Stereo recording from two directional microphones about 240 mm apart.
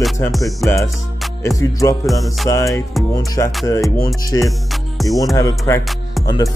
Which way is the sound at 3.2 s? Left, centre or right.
Centre.